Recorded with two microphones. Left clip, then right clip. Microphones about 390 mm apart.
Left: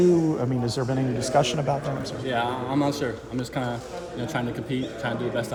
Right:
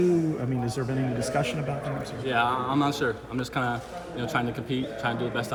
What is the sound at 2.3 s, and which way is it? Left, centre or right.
Speech, centre.